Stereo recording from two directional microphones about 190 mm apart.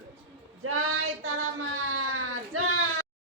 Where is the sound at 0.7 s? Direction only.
90° right.